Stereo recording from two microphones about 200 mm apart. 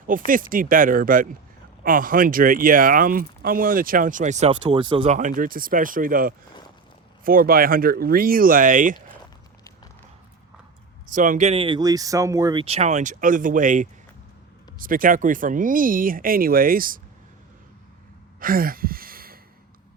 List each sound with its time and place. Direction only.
0.3 s speech: 45° right (ahead or behind); by 5.0 s 25° right (ahead or behind)
5.0 s speech: 40° right (ahead or behind)
11.1 s speech: 40° right (ahead or behind); by 12.6 s 15° right (ahead or behind)
12.6 s speech: 30° right (ahead or behind)
18.3 s a sound: 45° right (ahead or behind)